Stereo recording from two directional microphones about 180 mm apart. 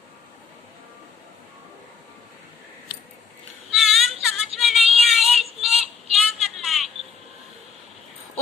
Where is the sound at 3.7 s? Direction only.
Centre (ahead or behind).